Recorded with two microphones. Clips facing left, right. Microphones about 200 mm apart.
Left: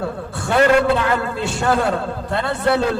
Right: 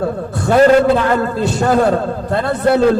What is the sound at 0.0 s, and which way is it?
A man's voice, 40° right (ahead or behind).